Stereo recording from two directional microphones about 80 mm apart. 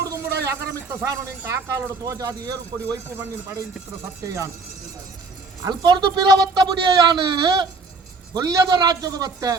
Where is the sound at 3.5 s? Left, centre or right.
Right.